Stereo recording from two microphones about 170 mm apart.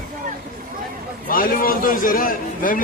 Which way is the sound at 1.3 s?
55° left (ahead or behind).